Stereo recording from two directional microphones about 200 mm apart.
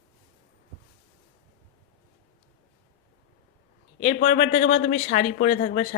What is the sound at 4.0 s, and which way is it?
A man's voice, 30° left (ahead or behind).